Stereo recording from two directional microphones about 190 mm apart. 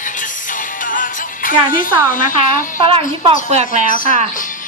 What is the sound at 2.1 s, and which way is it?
Speech, 45° left (ahead or behind).